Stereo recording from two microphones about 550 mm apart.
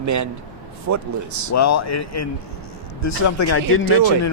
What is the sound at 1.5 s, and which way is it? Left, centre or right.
Speech, left.